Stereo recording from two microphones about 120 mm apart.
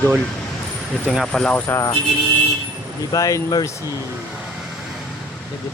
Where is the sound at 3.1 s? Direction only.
30° left (ahead or behind).